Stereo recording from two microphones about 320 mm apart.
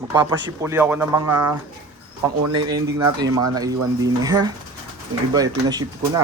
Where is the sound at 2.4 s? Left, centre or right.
Right.